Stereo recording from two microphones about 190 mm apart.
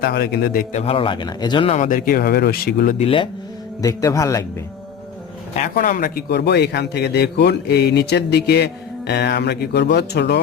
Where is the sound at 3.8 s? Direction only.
20° left (ahead or behind).